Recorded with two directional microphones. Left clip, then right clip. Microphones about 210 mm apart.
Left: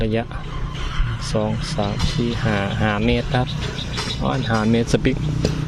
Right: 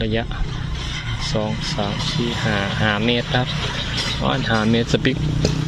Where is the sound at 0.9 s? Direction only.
55° right (ahead or behind).